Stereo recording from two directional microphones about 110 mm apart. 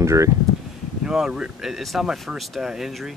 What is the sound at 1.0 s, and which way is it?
Speech, 5° right (ahead or behind).